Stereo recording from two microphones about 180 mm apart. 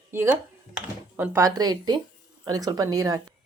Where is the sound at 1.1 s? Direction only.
10° right (ahead or behind).